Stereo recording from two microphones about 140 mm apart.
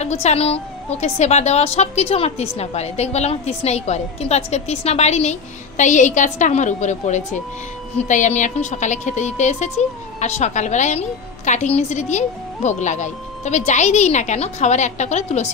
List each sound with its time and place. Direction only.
0.0 s a woman's voice: 55° left (ahead or behind)